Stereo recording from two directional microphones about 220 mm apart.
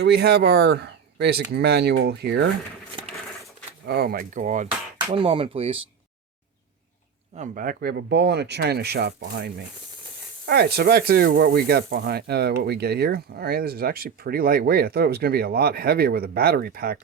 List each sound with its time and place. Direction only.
0.0 s speech: 50° right (ahead or behind)
3.8 s speech: 45° right (ahead or behind); by 5.8 s 25° right (ahead or behind)
7.3 s speech: 35° right (ahead or behind)